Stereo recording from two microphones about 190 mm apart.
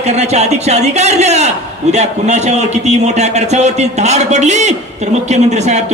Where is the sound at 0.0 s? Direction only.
35° right (ahead or behind).